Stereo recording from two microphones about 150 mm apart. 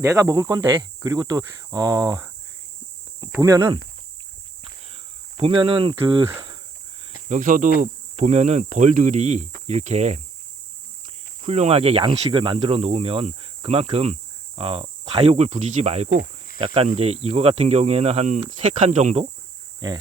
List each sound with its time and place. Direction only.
0.0 s speech: 20° right (ahead or behind)
5.4 s cricket: 35° right (ahead or behind)
7.3 s speech: 60° right (ahead or behind)
7.8 s speech: 50° right (ahead or behind)
11.4 s speech: 45° right (ahead or behind)